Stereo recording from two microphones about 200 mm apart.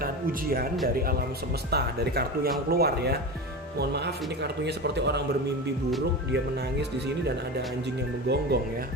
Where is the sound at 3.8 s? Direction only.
55° right (ahead or behind).